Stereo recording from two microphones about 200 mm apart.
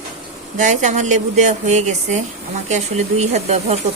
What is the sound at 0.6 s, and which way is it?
Speech, 35° right (ahead or behind).